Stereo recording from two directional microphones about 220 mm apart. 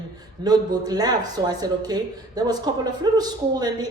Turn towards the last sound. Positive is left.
turn(degrees=-20)  # may be behind; listen again after turning